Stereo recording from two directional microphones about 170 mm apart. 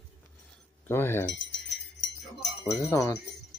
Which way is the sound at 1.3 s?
90° left.